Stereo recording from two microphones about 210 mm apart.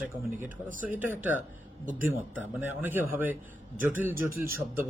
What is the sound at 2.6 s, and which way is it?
A man's voice, 10° right (ahead or behind).